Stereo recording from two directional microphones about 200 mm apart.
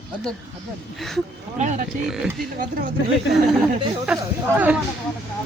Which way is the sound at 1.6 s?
40° right (ahead or behind).